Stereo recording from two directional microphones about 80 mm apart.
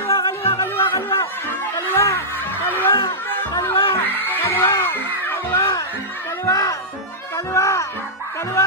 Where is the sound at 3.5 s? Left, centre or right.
Left.